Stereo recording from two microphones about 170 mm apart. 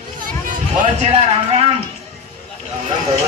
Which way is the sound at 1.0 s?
35° right (ahead or behind).